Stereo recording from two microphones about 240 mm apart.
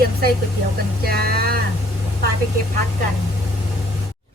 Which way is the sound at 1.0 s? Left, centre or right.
Right.